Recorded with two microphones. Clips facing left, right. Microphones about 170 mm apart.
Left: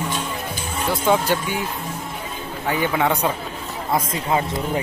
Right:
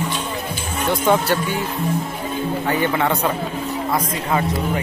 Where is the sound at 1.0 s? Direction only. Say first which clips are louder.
Right 1 dB; 10° left (ahead or behind).